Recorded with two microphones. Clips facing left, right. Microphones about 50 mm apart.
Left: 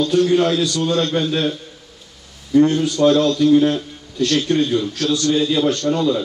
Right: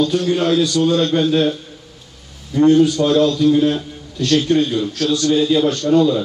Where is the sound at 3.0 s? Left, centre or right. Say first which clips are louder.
Left 2 dB; centre.